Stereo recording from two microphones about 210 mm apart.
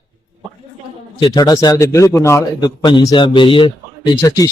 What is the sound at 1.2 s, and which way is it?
A man's voice, 20° left (ahead or behind).